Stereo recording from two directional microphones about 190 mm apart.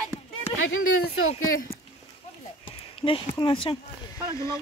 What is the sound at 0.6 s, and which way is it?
Speech, 90° left.